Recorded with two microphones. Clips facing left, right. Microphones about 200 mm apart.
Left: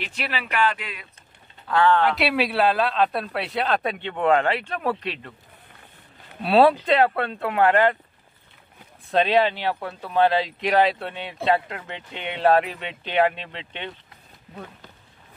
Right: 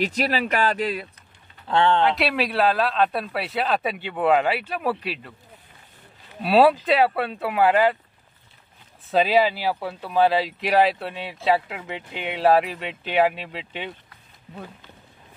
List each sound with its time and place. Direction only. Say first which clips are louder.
0.0 s speech: right 8 dB; 40° right (ahead or behind)
1.7 s speech: even; 25° right (ahead or behind)
2.1 s speech: left 1 dB; centre (ahead or behind)
6.4 s speech: even; centre (ahead or behind)
9.1 s speech: right 1 dB; 5° right (ahead or behind)